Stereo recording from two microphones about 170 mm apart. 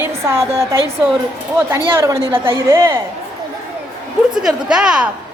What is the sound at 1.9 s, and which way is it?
A woman's voice, 15° right (ahead or behind).